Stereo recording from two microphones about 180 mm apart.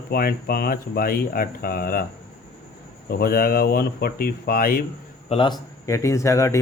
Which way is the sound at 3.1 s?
55° left (ahead or behind).